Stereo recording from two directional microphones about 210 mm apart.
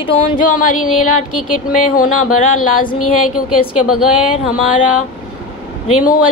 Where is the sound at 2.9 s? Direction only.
90° left.